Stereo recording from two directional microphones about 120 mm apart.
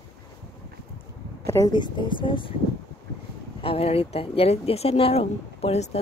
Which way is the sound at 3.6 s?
55° left (ahead or behind).